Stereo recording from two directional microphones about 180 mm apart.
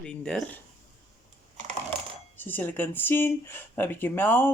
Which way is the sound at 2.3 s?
10° left (ahead or behind).